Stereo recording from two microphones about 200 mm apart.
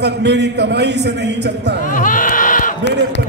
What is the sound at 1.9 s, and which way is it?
Speech, 40° left (ahead or behind).